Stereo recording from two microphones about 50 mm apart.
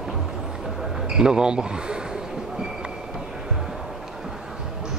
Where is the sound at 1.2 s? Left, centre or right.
Centre.